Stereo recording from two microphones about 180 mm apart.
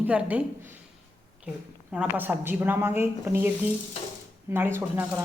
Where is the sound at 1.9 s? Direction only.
10° right (ahead or behind).